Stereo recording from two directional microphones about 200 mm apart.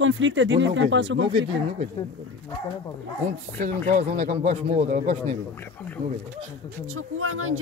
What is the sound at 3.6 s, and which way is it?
A man's voice, 40° right (ahead or behind).